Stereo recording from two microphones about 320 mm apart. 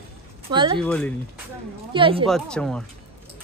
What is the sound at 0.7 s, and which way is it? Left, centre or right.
Speech, centre.